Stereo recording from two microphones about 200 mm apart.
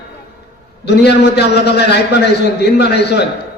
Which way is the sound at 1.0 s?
55° left (ahead or behind).